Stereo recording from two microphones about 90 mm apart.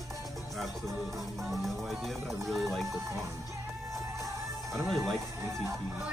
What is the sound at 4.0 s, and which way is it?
Music, 35° right (ahead or behind).